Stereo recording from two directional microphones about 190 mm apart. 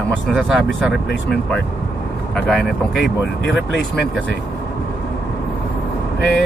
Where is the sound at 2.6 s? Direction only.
60° left (ahead or behind).